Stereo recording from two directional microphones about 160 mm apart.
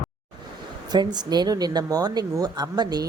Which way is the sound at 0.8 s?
25° right (ahead or behind).